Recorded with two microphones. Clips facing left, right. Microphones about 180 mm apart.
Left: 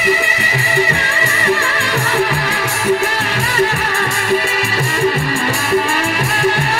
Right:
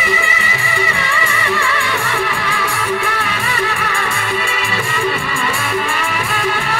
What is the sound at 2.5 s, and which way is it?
Music, 65° left (ahead or behind).